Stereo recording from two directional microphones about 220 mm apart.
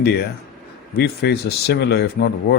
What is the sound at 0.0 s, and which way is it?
Speech, 45° left (ahead or behind).